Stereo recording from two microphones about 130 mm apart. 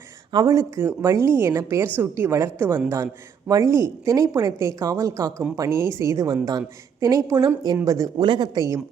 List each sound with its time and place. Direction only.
0.3 s speech: 35° right (ahead or behind)
0.8 s a woman's voice: 20° right (ahead or behind)